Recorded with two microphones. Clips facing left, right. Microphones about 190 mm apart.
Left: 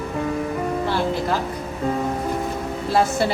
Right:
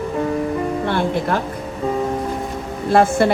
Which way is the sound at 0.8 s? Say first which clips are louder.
Right 2 dB; 60° right (ahead or behind).